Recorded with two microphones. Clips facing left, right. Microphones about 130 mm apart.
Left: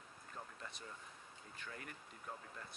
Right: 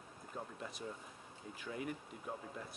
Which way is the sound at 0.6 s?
Centre (ahead or behind).